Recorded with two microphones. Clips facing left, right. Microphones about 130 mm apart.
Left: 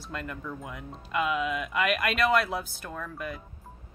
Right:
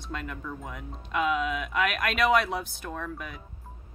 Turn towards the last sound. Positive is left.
turn(degrees=0)  # may be behind; listen again after turning